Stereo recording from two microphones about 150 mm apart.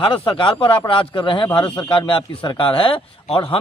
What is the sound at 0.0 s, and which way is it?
Speech, 35° left (ahead or behind).